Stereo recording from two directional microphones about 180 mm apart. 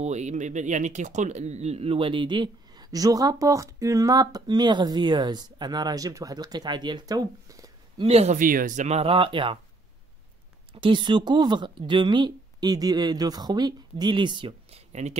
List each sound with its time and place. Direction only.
0.0 s speech: 40° right (ahead or behind); by 7.7 s 20° right (ahead or behind)
8.0 s speech: 35° right (ahead or behind)
8.4 s speech: 50° right (ahead or behind); by 9.6 s 30° right (ahead or behind)
10.7 s speech: 25° right (ahead or behind)